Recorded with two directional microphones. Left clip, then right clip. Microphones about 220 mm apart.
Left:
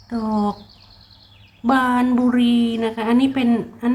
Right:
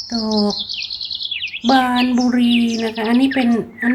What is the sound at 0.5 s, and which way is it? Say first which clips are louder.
Chirp: right 18 dB; 40° right (ahead or behind).